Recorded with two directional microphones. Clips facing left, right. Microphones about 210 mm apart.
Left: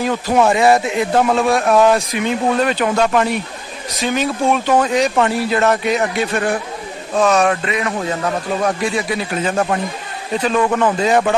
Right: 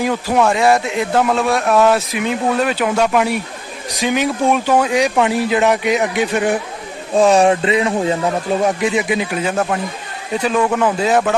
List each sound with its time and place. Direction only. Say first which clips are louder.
0.0 s speech: even; 10° right (ahead or behind)
0.3 s speech: left 1 dB; 5° left (ahead or behind); by 6.6 s 15° right (ahead or behind)
7.2 s a man's voice: right 3 dB; 30° right (ahead or behind); by 11.3 s centre (ahead or behind)